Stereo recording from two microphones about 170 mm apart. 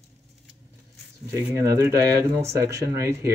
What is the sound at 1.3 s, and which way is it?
Speech, 20° right (ahead or behind).